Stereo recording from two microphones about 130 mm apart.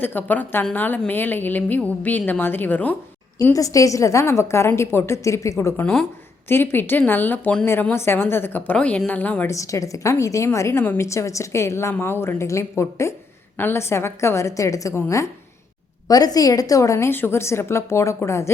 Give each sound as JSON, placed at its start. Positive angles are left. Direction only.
{"t": 0.0, "sound": "a woman's voice", "side_deg": 15}
{"t": 3.5, "sound": "a woman's voice", "side_deg": 25}
{"t": 9.5, "sound": "a woman's voice", "side_deg": 25}